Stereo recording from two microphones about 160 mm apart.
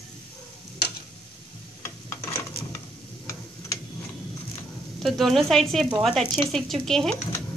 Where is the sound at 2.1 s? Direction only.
15° left (ahead or behind).